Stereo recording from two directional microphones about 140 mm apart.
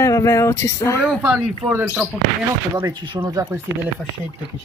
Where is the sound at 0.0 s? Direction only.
20° left (ahead or behind).